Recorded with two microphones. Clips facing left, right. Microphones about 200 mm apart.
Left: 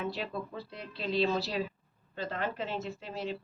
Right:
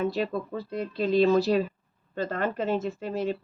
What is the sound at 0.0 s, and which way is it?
Speech, 45° right (ahead or behind).